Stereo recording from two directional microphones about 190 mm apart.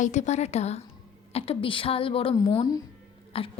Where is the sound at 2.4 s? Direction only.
20° left (ahead or behind).